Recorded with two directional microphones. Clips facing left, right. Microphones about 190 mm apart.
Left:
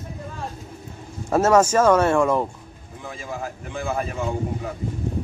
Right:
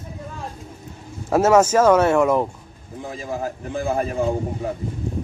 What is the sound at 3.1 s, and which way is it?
A man's voice, 35° right (ahead or behind).